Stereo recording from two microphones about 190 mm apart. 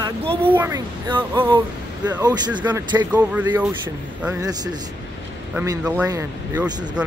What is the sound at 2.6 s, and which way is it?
Speech, 15° right (ahead or behind).